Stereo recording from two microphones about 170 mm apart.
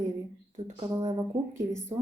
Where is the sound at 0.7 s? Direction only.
25° right (ahead or behind).